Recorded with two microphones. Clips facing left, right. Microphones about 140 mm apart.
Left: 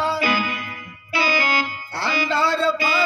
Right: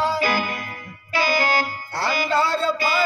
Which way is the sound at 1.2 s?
45° right (ahead or behind).